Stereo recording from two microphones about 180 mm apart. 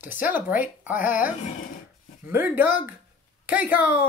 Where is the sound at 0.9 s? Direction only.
50° left (ahead or behind).